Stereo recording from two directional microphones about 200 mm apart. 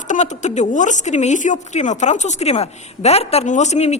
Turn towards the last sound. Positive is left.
turn(degrees=35)  # may be behind; listen again after turning